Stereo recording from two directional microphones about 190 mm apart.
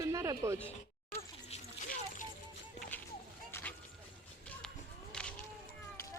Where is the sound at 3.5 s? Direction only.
10° left (ahead or behind).